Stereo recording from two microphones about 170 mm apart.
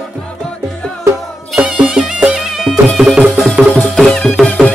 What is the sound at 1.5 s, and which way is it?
Music, 5° right (ahead or behind).